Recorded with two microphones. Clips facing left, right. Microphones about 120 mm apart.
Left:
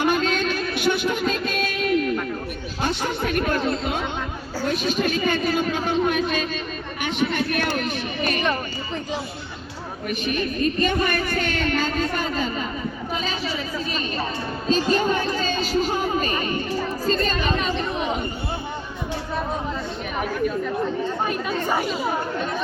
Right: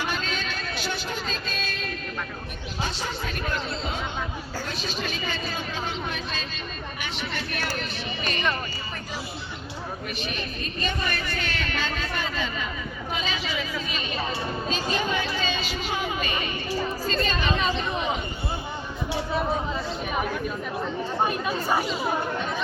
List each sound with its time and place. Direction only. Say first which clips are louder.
0.0 s music: left 9 dB; 50° left (ahead or behind)
2.8 s chatter: left 7 dB; 60° left (ahead or behind)
4.7 s speech: left 11 dB; 50° left (ahead or behind)
7.0 s a sound: left 11 dB; 50° left (ahead or behind)
10.1 s a woman's voice: left 8 dB; 50° left (ahead or behind)
13.1 s a sound: left 1 dB; 40° left (ahead or behind)
17.1 s chatter: left 5 dB; 45° left (ahead or behind)
21.2 s speech: left 2 dB; 5° right (ahead or behind)